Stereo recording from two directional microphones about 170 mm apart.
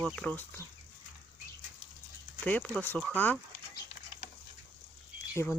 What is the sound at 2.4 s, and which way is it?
Speech, 5° left (ahead or behind).